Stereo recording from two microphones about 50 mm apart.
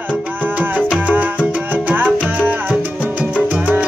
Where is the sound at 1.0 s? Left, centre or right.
Right.